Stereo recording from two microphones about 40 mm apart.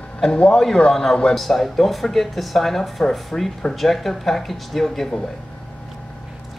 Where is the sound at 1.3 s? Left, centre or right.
Centre.